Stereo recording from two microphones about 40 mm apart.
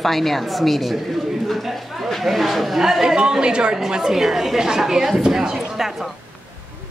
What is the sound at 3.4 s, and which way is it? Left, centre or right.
A woman's voice, right.